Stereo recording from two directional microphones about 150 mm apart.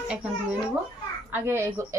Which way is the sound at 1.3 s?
15° right (ahead or behind).